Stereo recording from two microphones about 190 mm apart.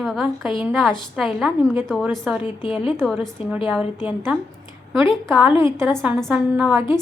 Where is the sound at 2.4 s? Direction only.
25° left (ahead or behind).